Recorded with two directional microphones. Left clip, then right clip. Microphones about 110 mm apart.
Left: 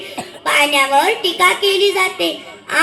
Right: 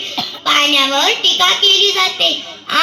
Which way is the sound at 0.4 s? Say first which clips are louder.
Right 1 dB; 35° left (ahead or behind).